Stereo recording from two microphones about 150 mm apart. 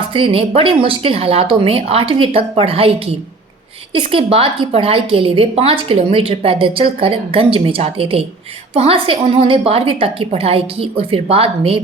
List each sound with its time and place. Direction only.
0.1 s a woman's voice: 40° right (ahead or behind)
3.9 s a woman's voice: 35° right (ahead or behind)